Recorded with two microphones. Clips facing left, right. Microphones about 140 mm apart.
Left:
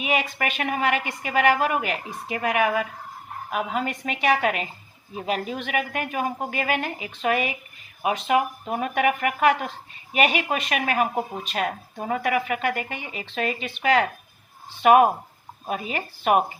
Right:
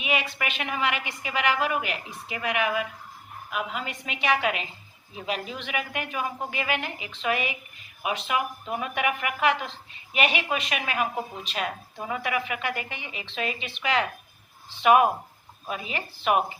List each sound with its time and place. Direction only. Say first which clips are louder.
0.0 s speech: left 4 dB; 45° left (ahead or behind)